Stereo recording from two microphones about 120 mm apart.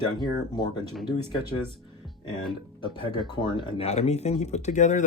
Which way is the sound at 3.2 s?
40° left (ahead or behind).